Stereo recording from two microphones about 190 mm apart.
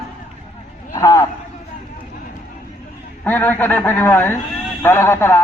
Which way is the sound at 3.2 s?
10° left (ahead or behind).